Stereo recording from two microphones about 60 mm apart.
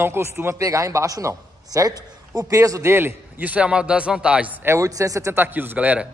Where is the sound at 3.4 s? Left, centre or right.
Right.